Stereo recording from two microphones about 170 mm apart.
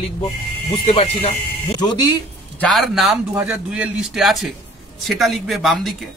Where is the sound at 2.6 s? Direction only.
Centre (ahead or behind).